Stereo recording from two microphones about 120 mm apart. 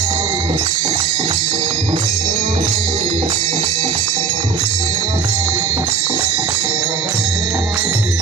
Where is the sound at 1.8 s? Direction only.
90° right.